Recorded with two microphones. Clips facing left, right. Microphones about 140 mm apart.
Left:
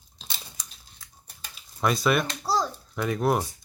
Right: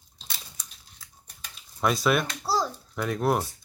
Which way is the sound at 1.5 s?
Centre (ahead or behind).